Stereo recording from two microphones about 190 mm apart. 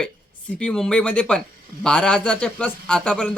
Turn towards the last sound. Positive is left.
turn(degrees=5)  # may be behind; listen again after turning